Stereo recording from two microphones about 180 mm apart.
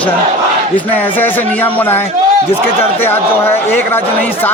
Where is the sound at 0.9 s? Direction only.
10° left (ahead or behind).